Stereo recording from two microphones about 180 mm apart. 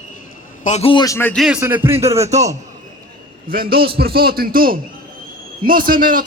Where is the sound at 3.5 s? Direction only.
55° right (ahead or behind).